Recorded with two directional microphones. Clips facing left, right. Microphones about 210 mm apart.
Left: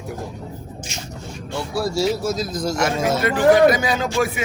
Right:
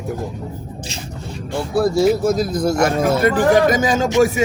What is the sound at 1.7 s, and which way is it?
A man's voice, 55° right (ahead or behind).